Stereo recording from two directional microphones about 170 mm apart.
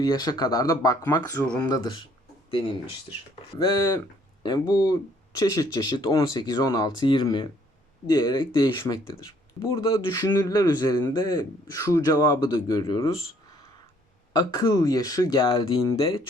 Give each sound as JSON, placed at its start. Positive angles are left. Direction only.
{"t": 0.0, "sound": "speech", "side_deg": 25}
{"t": 3.6, "sound": "speech", "side_deg": 25}
{"t": 14.3, "sound": "speech", "side_deg": 25}